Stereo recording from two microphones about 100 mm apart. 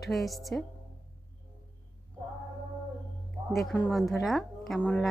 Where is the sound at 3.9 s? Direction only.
Centre (ahead or behind).